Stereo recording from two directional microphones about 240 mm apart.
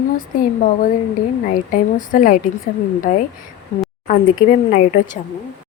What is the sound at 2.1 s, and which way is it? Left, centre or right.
Speech, left.